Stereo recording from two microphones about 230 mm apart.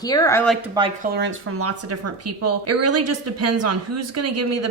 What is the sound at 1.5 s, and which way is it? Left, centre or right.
A woman's voice, right.